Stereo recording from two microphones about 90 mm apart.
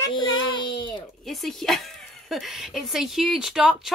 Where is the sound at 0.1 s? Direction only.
60° left (ahead or behind).